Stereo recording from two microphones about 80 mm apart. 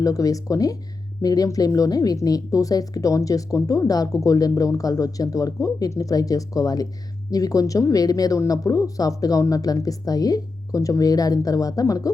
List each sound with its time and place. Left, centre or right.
0.0 s speech: left